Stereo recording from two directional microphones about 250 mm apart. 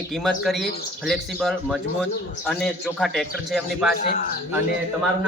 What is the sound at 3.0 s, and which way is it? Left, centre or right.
Speech, centre.